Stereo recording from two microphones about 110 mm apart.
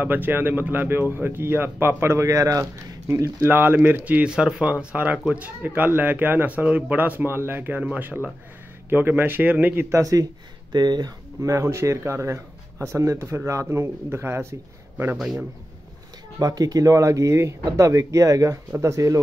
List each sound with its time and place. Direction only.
0.0 s speech: 15° right (ahead or behind)
9.8 s speech: 30° right (ahead or behind)
10.7 s speech: 40° right (ahead or behind); by 14.5 s 25° right (ahead or behind)
15.1 s a man's voice: 5° right (ahead or behind)
16.3 s speech: 35° right (ahead or behind)